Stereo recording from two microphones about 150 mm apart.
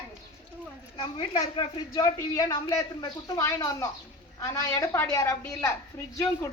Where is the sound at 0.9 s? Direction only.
35° left (ahead or behind).